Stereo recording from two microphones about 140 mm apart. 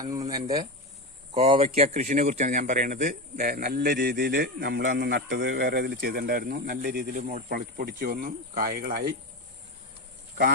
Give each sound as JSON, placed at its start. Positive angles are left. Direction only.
{"t": 0.0, "sound": "speech", "side_deg": -25}
{"t": 1.3, "sound": "a man's voice", "side_deg": -45}